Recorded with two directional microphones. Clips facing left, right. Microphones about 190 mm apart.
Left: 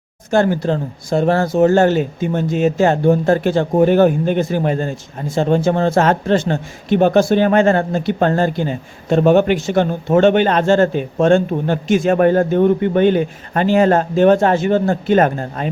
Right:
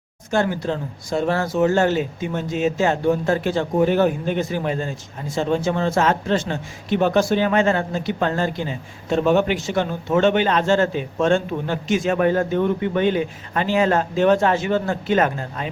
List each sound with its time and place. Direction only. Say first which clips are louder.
0.3 s speech: left 6 dB; 45° left (ahead or behind)
1.1 s speech: left 6 dB; 50° left (ahead or behind)